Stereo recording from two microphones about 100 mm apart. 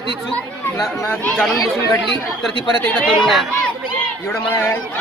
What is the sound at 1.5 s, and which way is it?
Speech, 35° left (ahead or behind).